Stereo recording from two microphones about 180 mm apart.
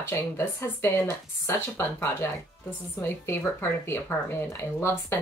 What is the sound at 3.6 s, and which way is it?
A woman's voice, 15° left (ahead or behind).